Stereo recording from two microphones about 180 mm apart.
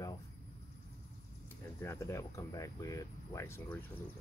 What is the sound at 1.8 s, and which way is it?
Speech, 15° left (ahead or behind).